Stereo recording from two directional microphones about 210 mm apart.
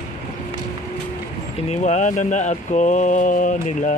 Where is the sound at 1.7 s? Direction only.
35° left (ahead or behind).